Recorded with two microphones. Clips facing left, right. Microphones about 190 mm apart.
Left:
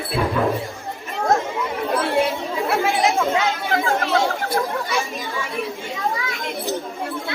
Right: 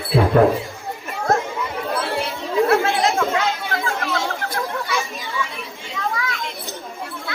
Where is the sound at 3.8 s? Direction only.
35° left (ahead or behind).